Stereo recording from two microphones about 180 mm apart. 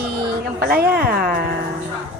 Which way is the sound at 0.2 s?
60° right (ahead or behind).